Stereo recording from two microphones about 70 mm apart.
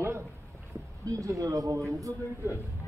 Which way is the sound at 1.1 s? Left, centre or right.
Right.